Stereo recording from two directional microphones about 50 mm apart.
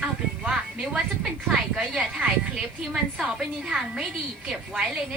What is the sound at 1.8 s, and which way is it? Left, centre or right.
A woman's voice, centre.